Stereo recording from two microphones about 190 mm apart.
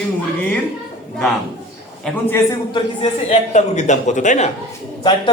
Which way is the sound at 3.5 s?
40° left (ahead or behind).